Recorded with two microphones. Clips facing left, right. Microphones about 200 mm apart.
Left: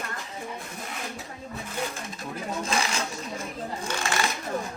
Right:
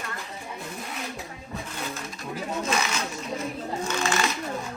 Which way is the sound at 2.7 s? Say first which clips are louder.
Even; 30° left (ahead or behind).